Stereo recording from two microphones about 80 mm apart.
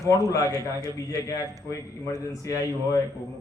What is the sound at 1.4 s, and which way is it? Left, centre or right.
A man's voice, left.